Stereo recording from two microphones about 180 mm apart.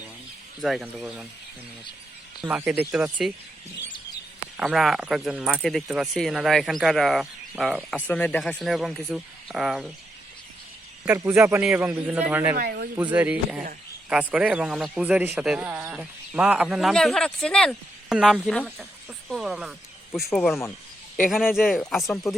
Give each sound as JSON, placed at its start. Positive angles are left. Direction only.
{"t": 0.6, "sound": "a man's voice", "side_deg": 0}
{"t": 2.4, "sound": "speech", "side_deg": -10}
{"t": 4.5, "sound": "a man's voice", "side_deg": 0}
{"t": 11.0, "sound": "speech", "side_deg": -10}
{"t": 12.5, "sound": "speech", "side_deg": -55}
{"t": 13.0, "sound": "a man's voice", "side_deg": -10}